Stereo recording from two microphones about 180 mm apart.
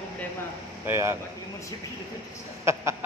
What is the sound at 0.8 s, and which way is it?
Speech, 15° right (ahead or behind).